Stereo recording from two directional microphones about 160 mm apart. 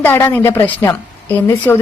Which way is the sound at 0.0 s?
20° left (ahead or behind).